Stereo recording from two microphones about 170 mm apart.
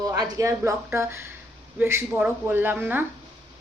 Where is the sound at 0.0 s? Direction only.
20° right (ahead or behind).